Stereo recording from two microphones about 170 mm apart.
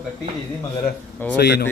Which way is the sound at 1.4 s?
75° left (ahead or behind).